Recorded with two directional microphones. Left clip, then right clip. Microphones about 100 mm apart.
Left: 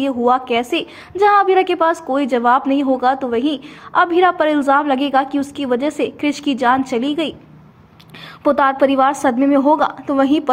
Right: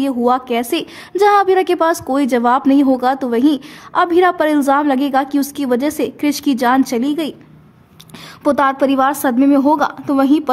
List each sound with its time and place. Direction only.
0.0 s a woman's voice: 30° right (ahead or behind)
8.5 s a woman's voice: 30° right (ahead or behind)